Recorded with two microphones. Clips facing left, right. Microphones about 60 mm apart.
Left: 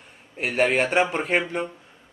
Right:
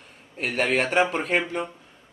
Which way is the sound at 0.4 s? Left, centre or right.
Centre.